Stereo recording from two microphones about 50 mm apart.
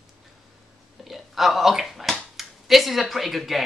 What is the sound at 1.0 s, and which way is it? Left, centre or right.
Speech, centre.